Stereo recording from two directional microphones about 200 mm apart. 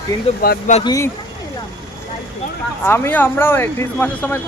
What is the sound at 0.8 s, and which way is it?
Speech, 15° left (ahead or behind).